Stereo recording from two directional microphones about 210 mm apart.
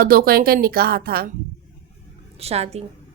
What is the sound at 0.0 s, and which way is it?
Speech, 45° right (ahead or behind).